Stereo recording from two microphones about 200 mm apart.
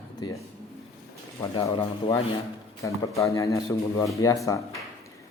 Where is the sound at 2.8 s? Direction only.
15° left (ahead or behind).